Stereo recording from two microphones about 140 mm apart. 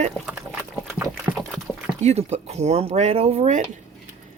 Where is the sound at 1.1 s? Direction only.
Centre (ahead or behind).